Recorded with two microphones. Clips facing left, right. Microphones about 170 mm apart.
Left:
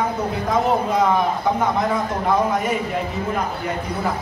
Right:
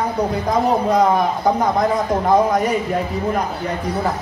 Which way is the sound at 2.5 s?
40° right (ahead or behind).